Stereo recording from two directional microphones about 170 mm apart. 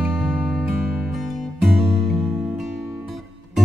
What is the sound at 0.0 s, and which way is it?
Music, 5° right (ahead or behind).